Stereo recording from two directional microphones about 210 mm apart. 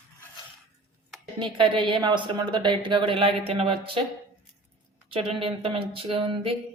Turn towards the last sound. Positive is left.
turn(degrees=-25)  # may be behind; listen again after turning